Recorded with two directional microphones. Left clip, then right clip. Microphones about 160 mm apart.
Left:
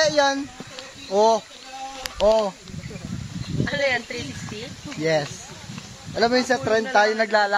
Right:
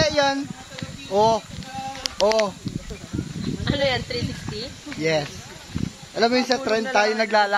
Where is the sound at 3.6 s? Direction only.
25° right (ahead or behind).